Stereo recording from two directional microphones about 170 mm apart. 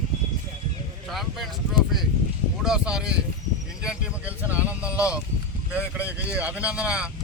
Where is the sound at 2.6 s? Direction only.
5° right (ahead or behind).